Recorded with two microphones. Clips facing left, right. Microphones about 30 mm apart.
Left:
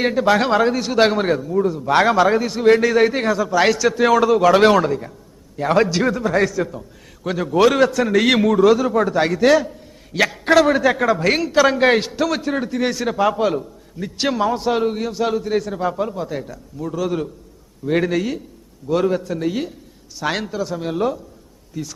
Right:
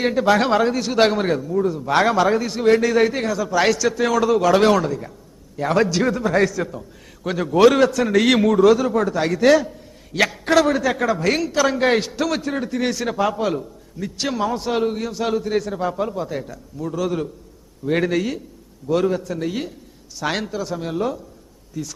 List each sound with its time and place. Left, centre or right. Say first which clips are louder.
0.0 s a man's voice: left 1 dB; centre
4.7 s a man's voice: left 2 dB; left
5.5 s a man's voice: left 2 dB; centre
21.7 s a man's voice: left 1 dB; centre